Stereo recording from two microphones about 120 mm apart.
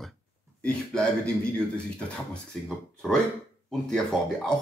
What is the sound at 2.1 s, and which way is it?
Speech, 5° left (ahead or behind).